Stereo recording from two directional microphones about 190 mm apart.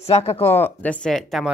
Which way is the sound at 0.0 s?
35° left (ahead or behind).